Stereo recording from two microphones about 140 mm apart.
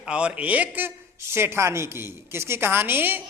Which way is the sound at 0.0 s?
5° right (ahead or behind).